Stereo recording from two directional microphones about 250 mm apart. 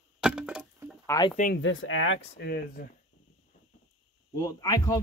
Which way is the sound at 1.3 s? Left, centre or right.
Left.